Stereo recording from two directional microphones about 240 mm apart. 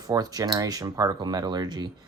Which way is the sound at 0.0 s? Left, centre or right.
Centre.